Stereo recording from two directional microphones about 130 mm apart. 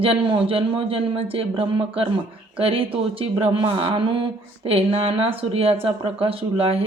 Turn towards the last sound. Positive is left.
turn(degrees=-45)  # may be behind; listen again after turning